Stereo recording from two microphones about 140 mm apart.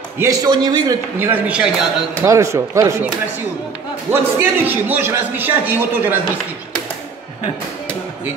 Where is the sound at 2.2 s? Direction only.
20° right (ahead or behind).